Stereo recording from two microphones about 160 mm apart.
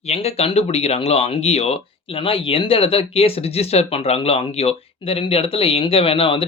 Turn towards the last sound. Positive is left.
turn(degrees=35)  # may be behind; listen again after turning